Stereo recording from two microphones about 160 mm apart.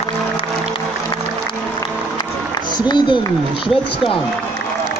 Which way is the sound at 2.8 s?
30° left (ahead or behind).